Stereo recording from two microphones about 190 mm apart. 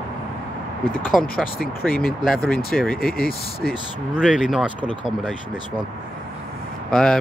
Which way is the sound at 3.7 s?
5° right (ahead or behind).